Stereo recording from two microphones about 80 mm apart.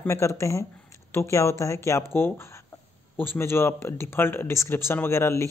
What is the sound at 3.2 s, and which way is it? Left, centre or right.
Speech, left.